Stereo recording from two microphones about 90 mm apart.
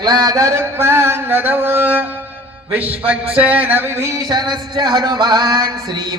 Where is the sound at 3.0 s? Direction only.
15° right (ahead or behind).